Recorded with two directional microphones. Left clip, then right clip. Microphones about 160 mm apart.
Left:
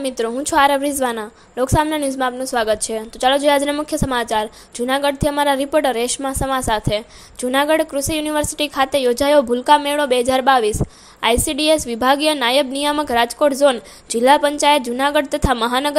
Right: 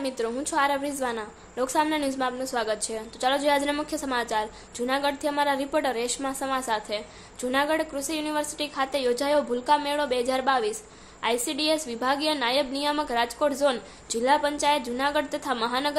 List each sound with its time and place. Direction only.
0.0 s a woman's voice: 40° left (ahead or behind)